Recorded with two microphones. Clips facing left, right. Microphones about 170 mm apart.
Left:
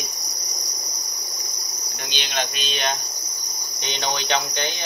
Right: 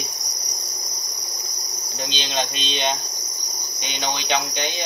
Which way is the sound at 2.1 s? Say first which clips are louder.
Right 1 dB; 25° right (ahead or behind).